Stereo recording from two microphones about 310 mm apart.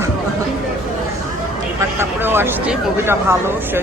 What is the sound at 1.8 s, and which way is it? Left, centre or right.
Speech, centre.